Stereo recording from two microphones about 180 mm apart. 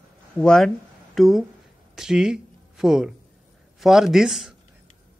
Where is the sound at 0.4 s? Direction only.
5° left (ahead or behind).